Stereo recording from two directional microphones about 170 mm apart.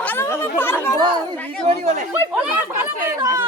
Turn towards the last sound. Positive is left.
turn(degrees=-20)  # may be behind; listen again after turning